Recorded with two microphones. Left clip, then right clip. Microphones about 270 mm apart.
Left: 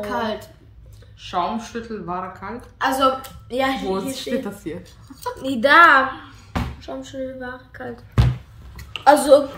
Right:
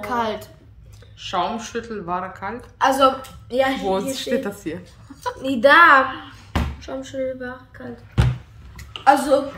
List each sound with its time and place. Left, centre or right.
0.0 s a woman's voice: centre
9.0 s a woman's voice: left